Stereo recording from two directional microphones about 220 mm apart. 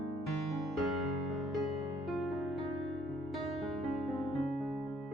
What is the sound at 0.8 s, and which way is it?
Music, centre (ahead or behind).